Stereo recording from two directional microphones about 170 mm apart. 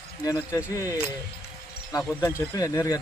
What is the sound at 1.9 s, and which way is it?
Speech, 15° left (ahead or behind).